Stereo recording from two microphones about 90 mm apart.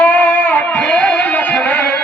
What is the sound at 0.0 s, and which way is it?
Music, 15° left (ahead or behind).